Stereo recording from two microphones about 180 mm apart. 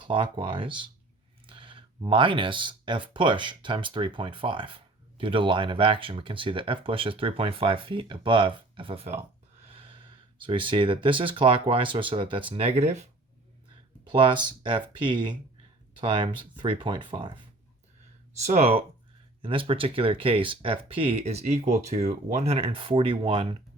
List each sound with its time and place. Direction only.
0.0 s speech: 25° right (ahead or behind)
9.7 s snort: 30° right (ahead or behind)
10.4 s speech: 25° right (ahead or behind)
14.0 s speech: 25° right (ahead or behind)
18.3 s speech: 40° right (ahead or behind)